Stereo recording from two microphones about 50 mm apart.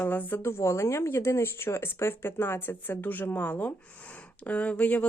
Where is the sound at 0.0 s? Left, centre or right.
Left.